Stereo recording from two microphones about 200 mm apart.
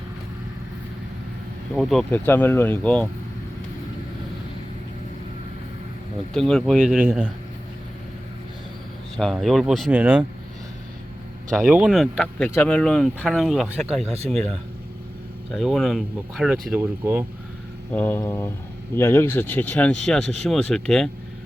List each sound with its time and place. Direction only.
1.7 s speech: centre (ahead or behind)
6.3 s speech: centre (ahead or behind)
9.1 s speech: centre (ahead or behind)
11.5 s speech: 5° right (ahead or behind)
14.0 s speech: 30° right (ahead or behind)
15.5 s speech: centre (ahead or behind)
17.9 s speech: 10° left (ahead or behind)